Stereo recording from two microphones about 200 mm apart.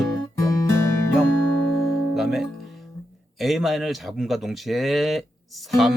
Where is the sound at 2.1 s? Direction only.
Centre (ahead or behind).